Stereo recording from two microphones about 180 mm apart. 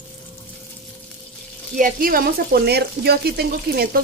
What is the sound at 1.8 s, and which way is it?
Speech, 50° right (ahead or behind).